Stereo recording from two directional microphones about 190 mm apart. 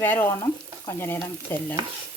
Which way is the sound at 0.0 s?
10° left (ahead or behind).